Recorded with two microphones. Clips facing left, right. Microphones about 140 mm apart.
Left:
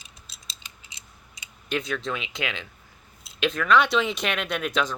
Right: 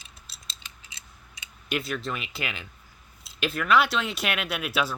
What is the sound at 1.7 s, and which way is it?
Speech, 5° right (ahead or behind).